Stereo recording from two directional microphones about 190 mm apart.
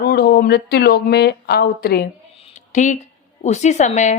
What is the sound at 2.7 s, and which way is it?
A woman's voice, 40° left (ahead or behind).